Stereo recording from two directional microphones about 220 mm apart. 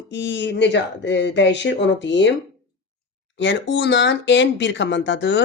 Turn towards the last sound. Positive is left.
turn(degrees=55)  # may be behind; listen again after turning